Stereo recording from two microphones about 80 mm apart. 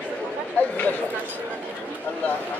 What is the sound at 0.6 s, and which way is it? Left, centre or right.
Speech, centre.